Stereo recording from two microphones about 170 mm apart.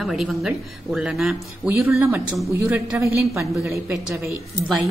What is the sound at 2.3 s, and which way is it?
Speech, 5° right (ahead or behind).